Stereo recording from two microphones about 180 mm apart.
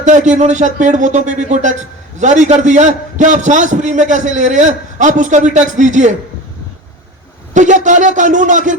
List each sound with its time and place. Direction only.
0.0 s a man's voice: 45° right (ahead or behind)
7.5 s a man's voice: 45° right (ahead or behind)